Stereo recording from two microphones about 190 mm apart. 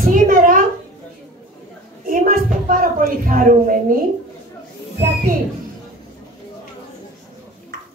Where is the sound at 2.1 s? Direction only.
45° right (ahead or behind).